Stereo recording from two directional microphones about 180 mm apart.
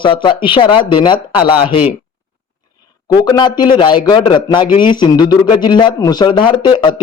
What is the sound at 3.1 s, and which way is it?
Speech, 25° left (ahead or behind).